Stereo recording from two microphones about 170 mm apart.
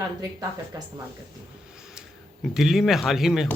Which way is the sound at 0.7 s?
20° right (ahead or behind).